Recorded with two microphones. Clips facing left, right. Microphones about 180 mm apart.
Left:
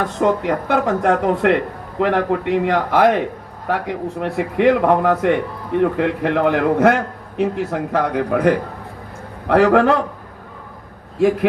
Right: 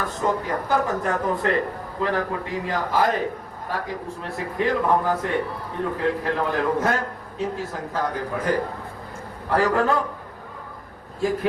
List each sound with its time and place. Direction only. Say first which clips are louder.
0.0 s a man's voice: left 7 dB; 70° left (ahead or behind)
11.2 s a man's voice: left 8 dB; 70° left (ahead or behind)